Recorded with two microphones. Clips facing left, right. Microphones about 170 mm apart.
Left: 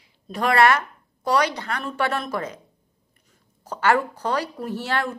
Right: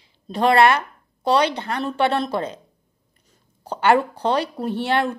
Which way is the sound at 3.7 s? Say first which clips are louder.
Right 3 dB; 25° right (ahead or behind).